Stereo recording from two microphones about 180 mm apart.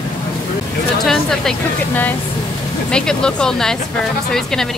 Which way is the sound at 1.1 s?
5° left (ahead or behind).